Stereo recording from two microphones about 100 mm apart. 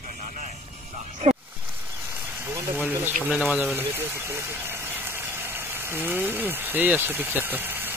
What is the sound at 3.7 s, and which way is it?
Speech, 25° right (ahead or behind).